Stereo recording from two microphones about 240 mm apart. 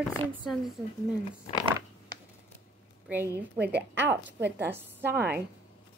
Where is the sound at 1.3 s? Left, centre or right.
Left.